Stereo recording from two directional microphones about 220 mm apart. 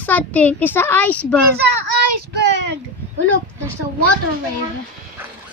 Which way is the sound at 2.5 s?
50° right (ahead or behind).